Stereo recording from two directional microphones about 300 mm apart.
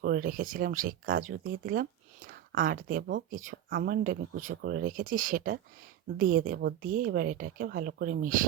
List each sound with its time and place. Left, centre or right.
0.0 s speech: right